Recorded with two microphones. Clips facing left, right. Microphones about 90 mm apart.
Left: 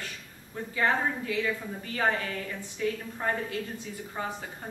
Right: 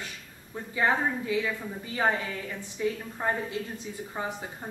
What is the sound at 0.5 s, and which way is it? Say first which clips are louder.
A woman's voice: right 1 dB; 20° right (ahead or behind).